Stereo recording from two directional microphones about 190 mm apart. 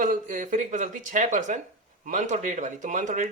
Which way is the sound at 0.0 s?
40° right (ahead or behind).